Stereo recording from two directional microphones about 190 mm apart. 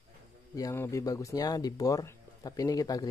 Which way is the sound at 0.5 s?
15° left (ahead or behind).